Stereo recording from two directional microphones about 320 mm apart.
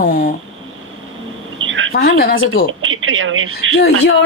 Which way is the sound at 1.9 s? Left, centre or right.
Left.